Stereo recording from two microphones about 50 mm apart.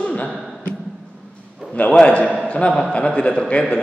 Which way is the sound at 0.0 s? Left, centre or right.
Left.